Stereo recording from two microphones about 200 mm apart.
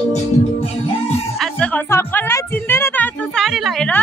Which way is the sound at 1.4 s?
5° left (ahead or behind).